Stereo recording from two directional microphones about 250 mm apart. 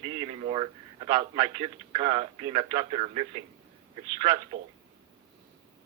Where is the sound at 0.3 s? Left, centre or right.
Right.